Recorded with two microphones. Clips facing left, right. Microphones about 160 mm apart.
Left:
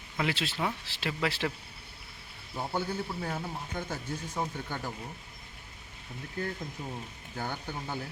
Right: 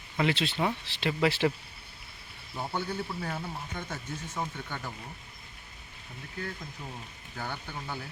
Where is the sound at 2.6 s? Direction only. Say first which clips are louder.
Left 1 dB; 10° left (ahead or behind).